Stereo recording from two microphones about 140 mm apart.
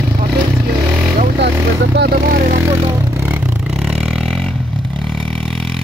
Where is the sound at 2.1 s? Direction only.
90° right.